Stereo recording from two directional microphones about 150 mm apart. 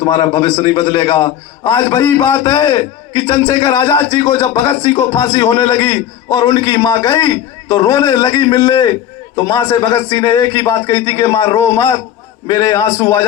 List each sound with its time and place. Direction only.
0.0 s a man's voice: 25° left (ahead or behind)